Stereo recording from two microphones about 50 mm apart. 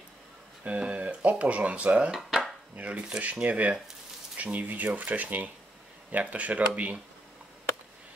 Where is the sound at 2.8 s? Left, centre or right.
Right.